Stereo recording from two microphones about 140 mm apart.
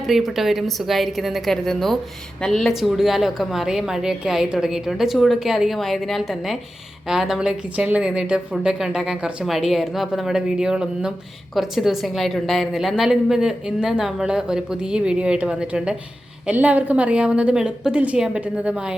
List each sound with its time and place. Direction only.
0.1 s a woman's voice: centre (ahead or behind)